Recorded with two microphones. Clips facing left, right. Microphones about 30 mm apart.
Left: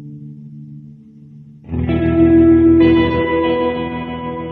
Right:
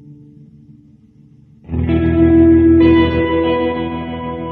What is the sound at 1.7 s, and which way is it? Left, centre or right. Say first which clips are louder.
Music: right 1 dB; centre.